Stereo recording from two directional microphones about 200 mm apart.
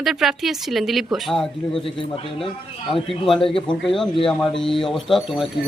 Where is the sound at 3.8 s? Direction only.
Centre (ahead or behind).